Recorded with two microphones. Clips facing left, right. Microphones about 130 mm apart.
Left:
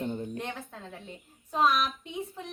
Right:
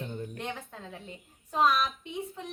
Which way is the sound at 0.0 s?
25° left (ahead or behind).